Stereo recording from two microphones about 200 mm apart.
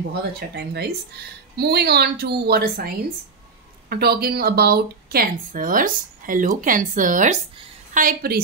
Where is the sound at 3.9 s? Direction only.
50° right (ahead or behind).